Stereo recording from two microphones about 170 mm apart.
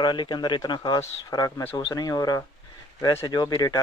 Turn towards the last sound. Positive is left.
turn(degrees=25)  # may be behind; listen again after turning